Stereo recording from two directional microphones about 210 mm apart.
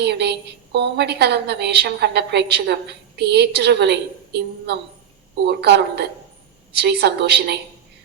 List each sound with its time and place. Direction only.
0.0 s a woman's voice: 50° right (ahead or behind)